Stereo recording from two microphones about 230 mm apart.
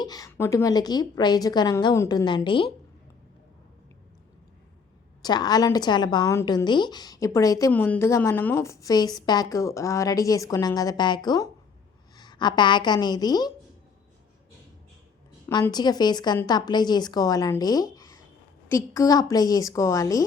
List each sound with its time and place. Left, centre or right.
0.0 s a woman's voice: centre
5.2 s a woman's voice: centre
15.4 s a woman's voice: centre